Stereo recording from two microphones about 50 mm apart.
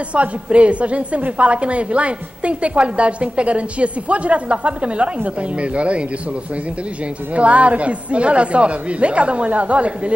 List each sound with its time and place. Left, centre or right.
0.1 s a woman's voice: right
7.3 s a woman's voice: right